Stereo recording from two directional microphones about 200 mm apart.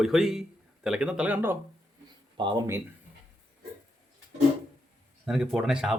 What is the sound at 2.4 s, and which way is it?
Speech, 20° right (ahead or behind).